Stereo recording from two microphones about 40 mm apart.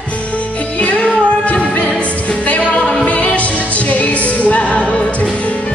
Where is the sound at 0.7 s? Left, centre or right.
Left.